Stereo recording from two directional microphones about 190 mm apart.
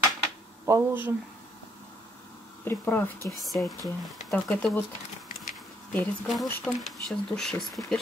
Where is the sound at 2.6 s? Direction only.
10° left (ahead or behind).